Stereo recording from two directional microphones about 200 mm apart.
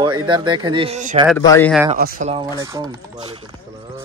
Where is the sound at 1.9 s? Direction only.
45° right (ahead or behind).